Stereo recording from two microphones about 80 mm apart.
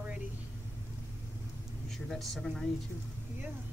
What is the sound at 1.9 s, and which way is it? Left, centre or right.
Speech, centre.